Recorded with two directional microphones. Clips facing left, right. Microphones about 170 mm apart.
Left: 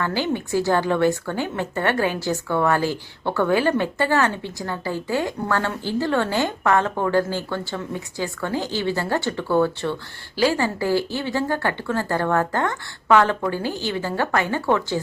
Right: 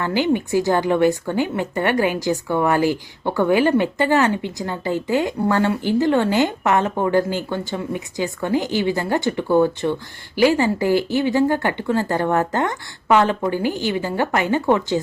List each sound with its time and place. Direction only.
0.0 s a woman's voice: 15° right (ahead or behind)